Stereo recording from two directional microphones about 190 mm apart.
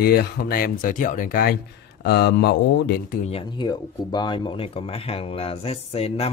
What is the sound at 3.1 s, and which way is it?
Speech, 35° left (ahead or behind).